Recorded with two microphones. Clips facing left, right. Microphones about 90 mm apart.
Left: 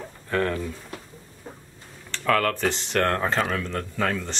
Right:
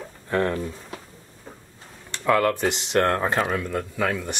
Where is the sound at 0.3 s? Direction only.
20° right (ahead or behind).